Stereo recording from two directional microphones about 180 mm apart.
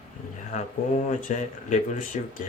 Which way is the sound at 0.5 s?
40° left (ahead or behind).